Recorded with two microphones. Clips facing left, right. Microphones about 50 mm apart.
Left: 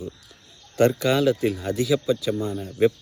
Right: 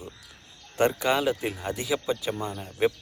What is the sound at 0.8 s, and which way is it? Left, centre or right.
Speech, centre.